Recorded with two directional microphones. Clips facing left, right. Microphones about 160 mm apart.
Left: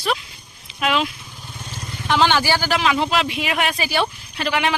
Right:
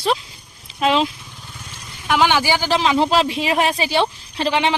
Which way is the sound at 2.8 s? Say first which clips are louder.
Right 3 dB; 30° right (ahead or behind).